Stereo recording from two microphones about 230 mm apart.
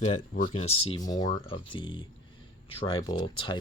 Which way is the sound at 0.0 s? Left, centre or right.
Left.